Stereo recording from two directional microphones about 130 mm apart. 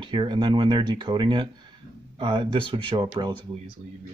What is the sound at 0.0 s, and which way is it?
Speech, 35° right (ahead or behind).